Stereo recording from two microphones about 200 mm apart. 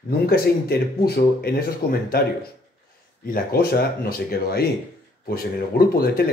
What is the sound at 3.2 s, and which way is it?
Speech, 50° left (ahead or behind).